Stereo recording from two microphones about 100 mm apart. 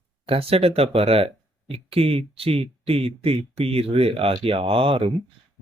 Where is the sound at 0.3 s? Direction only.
75° right (ahead or behind).